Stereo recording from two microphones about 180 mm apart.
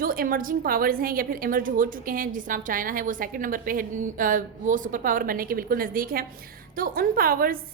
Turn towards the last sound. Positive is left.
turn(degrees=-55)  # may be behind; listen again after turning